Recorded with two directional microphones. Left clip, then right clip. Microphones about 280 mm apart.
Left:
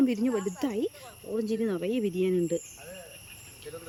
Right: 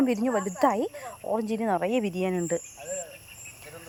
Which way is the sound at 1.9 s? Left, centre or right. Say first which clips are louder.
Right 2 dB; right.